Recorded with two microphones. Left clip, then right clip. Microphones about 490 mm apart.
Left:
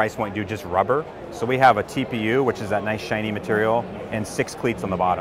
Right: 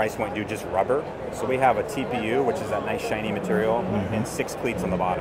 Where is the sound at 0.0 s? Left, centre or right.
Left.